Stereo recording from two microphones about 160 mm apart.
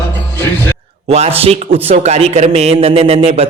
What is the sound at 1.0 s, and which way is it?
A man's voice, 40° right (ahead or behind).